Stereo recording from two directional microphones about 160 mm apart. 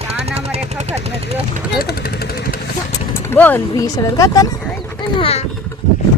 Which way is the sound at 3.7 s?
20° left (ahead or behind).